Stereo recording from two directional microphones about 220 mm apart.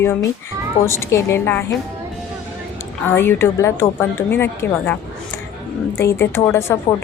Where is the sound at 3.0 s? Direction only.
10° left (ahead or behind).